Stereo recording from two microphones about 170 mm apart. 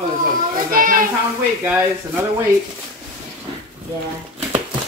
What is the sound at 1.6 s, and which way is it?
Speech, 10° right (ahead or behind).